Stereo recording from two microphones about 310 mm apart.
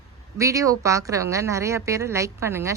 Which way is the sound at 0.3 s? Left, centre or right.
Centre.